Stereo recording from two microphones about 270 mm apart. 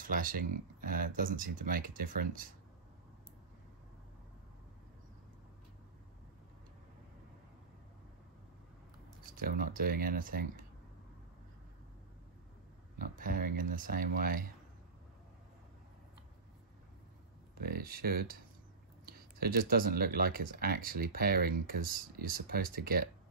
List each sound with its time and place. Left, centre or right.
0.0 s speech: right
9.2 s speech: right
13.0 s speech: right
17.6 s speech: right